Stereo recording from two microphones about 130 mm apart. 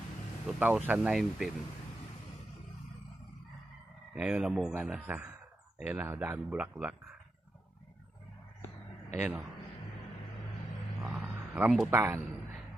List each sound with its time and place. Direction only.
0.4 s speech: 10° right (ahead or behind)
1.1 s speech: centre (ahead or behind)
4.1 s speech: 5° right (ahead or behind)
11.0 s a sound: 5° right (ahead or behind)
11.9 s speech: 15° right (ahead or behind)